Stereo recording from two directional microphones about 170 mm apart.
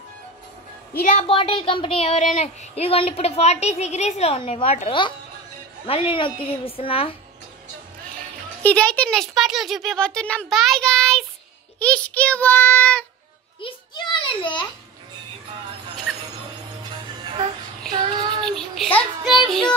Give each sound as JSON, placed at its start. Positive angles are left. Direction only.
{"t": 1.2, "sound": "speech", "side_deg": 35}
{"t": 8.6, "sound": "a child's voice", "side_deg": 5}
{"t": 13.6, "sound": "a sound", "side_deg": 30}
{"t": 17.9, "sound": "child singing", "side_deg": -25}
{"t": 18.4, "sound": "child singing", "side_deg": 5}
{"t": 19.3, "sound": "music", "side_deg": 0}